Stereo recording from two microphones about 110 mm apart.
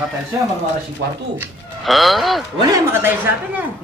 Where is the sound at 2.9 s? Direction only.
20° right (ahead or behind).